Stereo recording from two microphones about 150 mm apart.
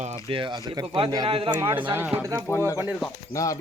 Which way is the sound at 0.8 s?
40° right (ahead or behind).